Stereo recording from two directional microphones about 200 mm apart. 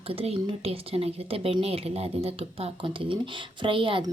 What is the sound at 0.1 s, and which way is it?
A woman's voice, 30° right (ahead or behind).